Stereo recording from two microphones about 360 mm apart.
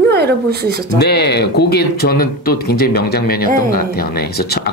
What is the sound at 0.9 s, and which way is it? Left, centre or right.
Speech, left.